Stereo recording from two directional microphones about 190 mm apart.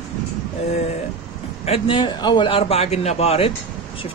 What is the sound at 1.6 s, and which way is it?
Speech, 30° left (ahead or behind).